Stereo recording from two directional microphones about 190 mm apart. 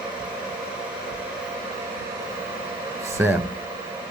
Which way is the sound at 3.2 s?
10° right (ahead or behind).